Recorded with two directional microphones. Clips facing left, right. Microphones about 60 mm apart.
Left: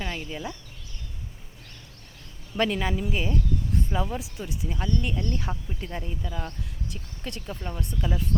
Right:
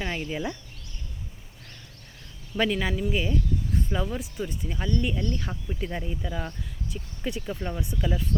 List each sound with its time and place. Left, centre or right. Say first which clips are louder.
0.2 s speech: right 4 dB; centre
2.6 s speech: even; centre
5.8 s speech: right 4 dB; centre
8.0 s speech: even; centre